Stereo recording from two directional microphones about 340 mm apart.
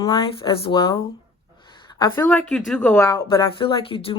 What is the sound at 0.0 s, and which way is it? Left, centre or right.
Speech, centre.